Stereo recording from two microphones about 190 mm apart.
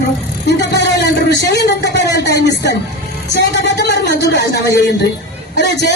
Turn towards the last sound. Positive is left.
turn(degrees=65)  # may be behind; listen again after turning